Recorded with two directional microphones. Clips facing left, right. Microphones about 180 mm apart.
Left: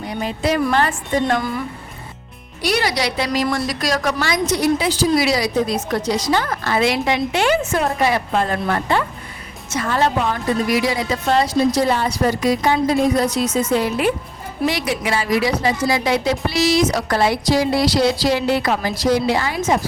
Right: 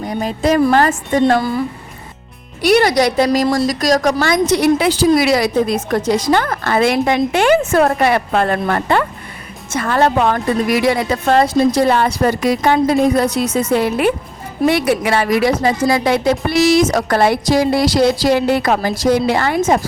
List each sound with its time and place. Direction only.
0.0 s a woman's voice: 45° right (ahead or behind)
2.6 s a woman's voice: 55° right (ahead or behind)
4.5 s a woman's voice: 65° right (ahead or behind)